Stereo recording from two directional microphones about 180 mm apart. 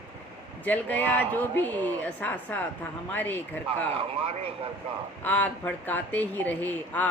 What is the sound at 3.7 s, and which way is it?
Speech, 30° right (ahead or behind).